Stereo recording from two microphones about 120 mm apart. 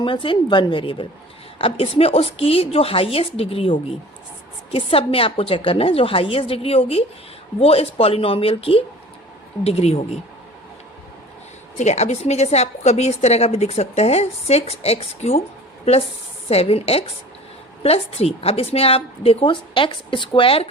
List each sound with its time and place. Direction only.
0.0 s a woman's voice: 45° left (ahead or behind); by 10.2 s 60° left (ahead or behind)
11.8 s a woman's voice: 70° left (ahead or behind)
16.5 s a woman's voice: 55° left (ahead or behind)